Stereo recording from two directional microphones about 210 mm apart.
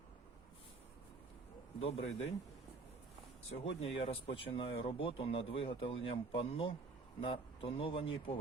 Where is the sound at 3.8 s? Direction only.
30° left (ahead or behind).